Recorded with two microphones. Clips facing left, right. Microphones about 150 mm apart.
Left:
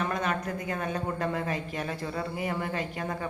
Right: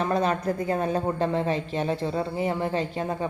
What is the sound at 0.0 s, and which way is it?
A woman's voice, 30° right (ahead or behind).